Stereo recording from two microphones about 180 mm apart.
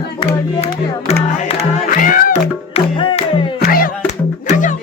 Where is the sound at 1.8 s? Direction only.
50° left (ahead or behind); by 3.3 s 30° left (ahead or behind).